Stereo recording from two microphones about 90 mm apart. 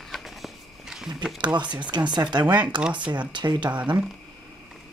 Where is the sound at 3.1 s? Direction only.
55° right (ahead or behind).